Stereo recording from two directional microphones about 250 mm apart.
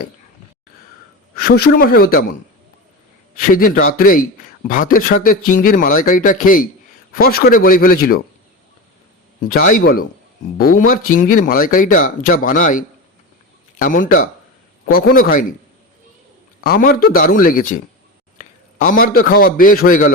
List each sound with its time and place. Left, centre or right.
1.4 s speech: left
3.3 s speech: left
9.5 s speech: left
16.6 s a man's voice: left